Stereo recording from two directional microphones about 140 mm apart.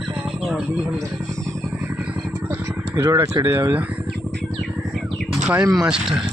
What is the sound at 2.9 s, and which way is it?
Speech, 15° right (ahead or behind).